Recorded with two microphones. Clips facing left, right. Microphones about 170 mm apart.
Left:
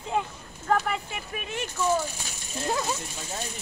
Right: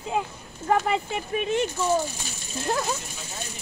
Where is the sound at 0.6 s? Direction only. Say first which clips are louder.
Right 3 dB; 20° right (ahead or behind).